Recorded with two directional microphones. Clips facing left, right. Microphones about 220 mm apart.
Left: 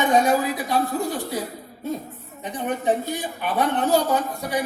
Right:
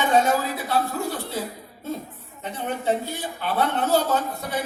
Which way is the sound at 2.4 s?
15° left (ahead or behind).